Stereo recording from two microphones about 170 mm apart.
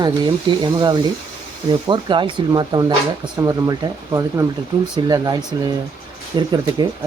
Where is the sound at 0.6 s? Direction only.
25° right (ahead or behind).